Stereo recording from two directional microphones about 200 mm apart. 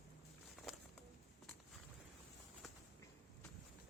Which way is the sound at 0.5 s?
Centre (ahead or behind).